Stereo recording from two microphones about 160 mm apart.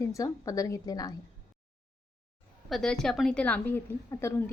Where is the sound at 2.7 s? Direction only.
5° left (ahead or behind).